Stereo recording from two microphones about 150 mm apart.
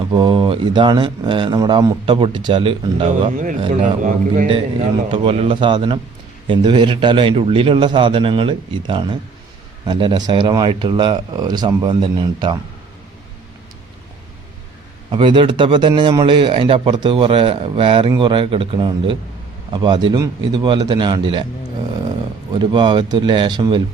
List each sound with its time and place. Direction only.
0.0 s speech: 30° right (ahead or behind)
3.2 s speech: 60° right (ahead or behind)
4.4 s speech: 40° right (ahead or behind)
15.1 s speech: 35° right (ahead or behind)
22.5 s speech: 30° right (ahead or behind)